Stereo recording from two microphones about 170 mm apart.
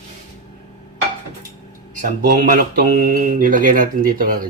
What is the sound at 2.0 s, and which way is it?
Speech, 50° right (ahead or behind).